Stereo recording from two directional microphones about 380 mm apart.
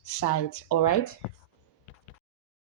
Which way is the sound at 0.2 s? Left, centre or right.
Left.